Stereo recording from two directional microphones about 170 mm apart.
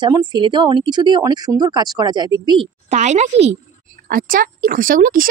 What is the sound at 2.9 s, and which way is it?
Speech, 45° right (ahead or behind).